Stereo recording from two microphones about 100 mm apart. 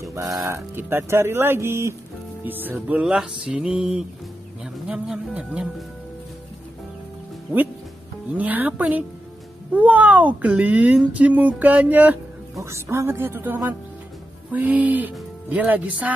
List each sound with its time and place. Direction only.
0.0 s music: 35° right (ahead or behind)
0.5 s speech: 25° right (ahead or behind)
2.4 s music: 20° right (ahead or behind)
8.4 s music: 15° right (ahead or behind)
12.5 s speech: 30° right (ahead or behind)
14.5 s music: 15° right (ahead or behind)